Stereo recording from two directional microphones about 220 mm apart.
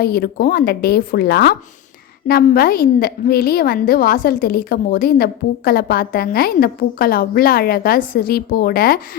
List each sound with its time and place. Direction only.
0.0 s a woman's voice: 45° left (ahead or behind)